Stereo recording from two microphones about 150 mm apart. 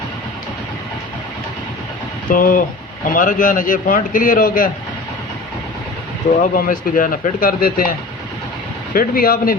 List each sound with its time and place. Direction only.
2.3 s a man's voice: 65° left (ahead or behind)
6.4 s a man's voice: 65° left (ahead or behind)